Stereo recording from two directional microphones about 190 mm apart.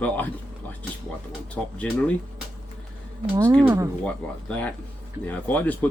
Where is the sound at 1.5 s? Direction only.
5° left (ahead or behind).